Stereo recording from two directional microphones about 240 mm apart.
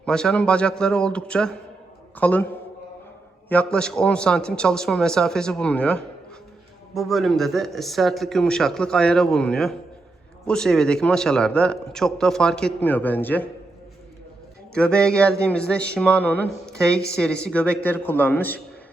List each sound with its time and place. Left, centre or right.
0.0 s a man's voice: centre
3.5 s a man's voice: centre
14.7 s a man's voice: centre